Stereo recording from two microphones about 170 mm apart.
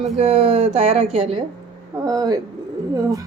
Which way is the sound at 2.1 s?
20° right (ahead or behind).